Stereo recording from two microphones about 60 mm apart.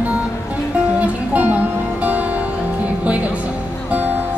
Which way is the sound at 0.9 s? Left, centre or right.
Right.